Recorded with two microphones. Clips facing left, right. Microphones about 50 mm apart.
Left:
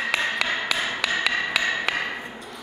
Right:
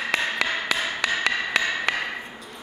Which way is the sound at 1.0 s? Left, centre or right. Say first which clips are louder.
Right 1 dB; centre.